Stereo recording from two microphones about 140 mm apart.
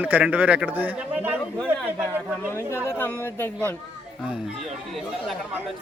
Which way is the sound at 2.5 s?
20° left (ahead or behind).